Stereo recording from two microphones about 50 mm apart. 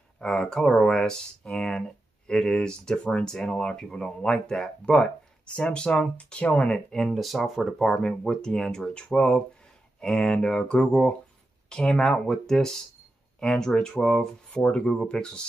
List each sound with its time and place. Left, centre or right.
0.2 s speech: centre
6.9 s speech: centre
14.5 s speech: left